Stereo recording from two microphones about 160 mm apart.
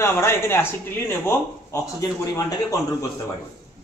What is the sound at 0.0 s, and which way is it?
Speech, 15° left (ahead or behind).